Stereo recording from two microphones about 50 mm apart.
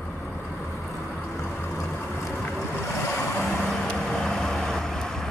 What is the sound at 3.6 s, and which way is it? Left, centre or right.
Vehicle, centre.